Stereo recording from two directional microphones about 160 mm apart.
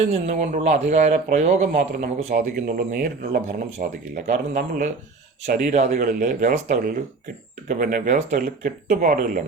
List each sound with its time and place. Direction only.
0.0 s speech: 45° right (ahead or behind)
2.4 s speech: 60° right (ahead or behind)
7.7 s speech: 60° right (ahead or behind)